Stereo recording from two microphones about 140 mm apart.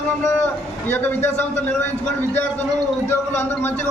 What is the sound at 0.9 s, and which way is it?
Speech, 15° left (ahead or behind).